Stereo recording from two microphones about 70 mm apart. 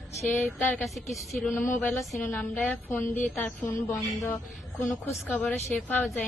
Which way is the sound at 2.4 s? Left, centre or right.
Left.